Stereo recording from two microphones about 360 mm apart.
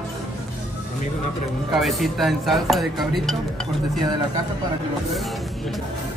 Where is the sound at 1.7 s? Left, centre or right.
Centre.